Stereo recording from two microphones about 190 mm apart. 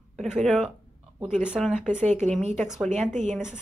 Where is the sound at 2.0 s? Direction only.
40° right (ahead or behind).